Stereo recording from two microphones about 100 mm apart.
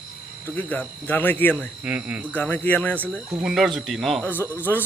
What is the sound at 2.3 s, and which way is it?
Speech, 20° left (ahead or behind).